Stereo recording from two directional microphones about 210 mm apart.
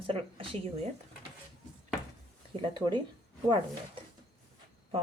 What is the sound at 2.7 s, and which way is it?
Speech, 20° right (ahead or behind).